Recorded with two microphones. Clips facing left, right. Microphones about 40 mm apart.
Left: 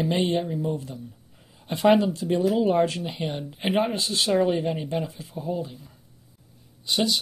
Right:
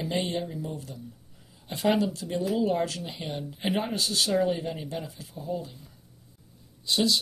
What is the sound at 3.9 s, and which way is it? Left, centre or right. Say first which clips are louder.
Speech: left 3 dB; left.